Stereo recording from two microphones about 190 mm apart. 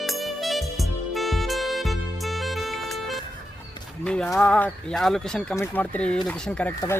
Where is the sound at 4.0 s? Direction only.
5° left (ahead or behind).